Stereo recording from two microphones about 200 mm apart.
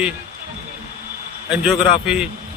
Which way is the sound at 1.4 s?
5° right (ahead or behind).